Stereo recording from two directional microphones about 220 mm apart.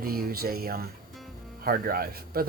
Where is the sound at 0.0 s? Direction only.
45° right (ahead or behind).